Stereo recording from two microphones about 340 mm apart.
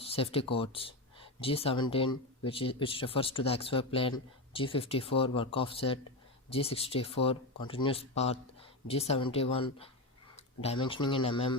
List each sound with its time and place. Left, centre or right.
0.0 s speech: centre